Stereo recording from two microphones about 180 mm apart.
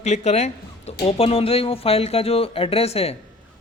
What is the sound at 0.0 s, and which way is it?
A man's voice, 40° left (ahead or behind).